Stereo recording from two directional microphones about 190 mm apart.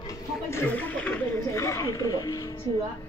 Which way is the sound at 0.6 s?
10° left (ahead or behind).